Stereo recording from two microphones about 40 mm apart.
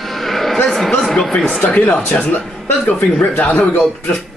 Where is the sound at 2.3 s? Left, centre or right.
Left.